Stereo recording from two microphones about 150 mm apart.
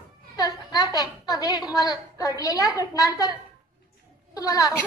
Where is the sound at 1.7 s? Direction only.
25° left (ahead or behind).